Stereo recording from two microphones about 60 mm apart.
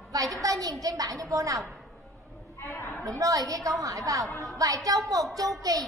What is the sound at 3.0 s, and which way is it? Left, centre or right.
A woman's voice, right.